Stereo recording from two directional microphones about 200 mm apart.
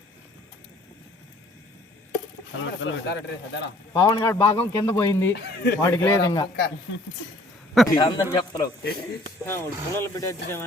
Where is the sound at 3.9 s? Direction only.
20° left (ahead or behind).